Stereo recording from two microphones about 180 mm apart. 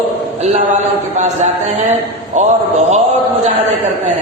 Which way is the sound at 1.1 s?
40° right (ahead or behind).